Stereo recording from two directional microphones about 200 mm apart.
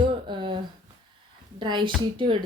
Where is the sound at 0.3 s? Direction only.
25° right (ahead or behind).